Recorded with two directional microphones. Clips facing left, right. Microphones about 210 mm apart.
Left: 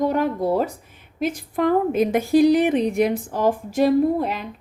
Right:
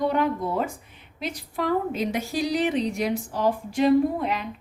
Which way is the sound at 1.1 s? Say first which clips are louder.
Left 7 dB; 50° left (ahead or behind).